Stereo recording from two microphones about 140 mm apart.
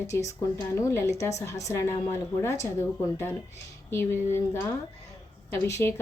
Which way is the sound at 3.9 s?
15° left (ahead or behind).